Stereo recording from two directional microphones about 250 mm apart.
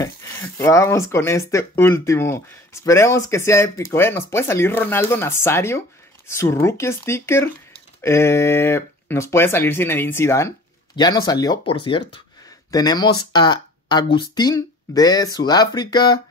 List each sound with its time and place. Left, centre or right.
0.0 s speech: centre